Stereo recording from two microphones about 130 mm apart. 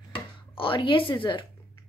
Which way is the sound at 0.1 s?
40° left (ahead or behind).